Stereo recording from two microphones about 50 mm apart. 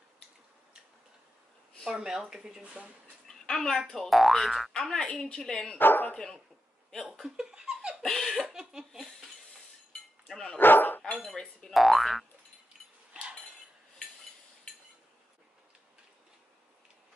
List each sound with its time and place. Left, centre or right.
1.9 s speech: centre
2.6 s speech: right
3.3 s a woman's voice: centre
5.8 s speech: left
6.1 s a woman's voice: centre
7.5 s laughter: centre
8.0 s laughter: centre
8.9 s cutlery: centre
10.2 s dog: centre
10.6 s dog: left
11.2 s a woman's voice: centre
11.8 s boing: centre